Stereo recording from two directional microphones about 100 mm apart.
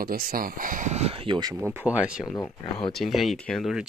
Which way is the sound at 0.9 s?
80° right.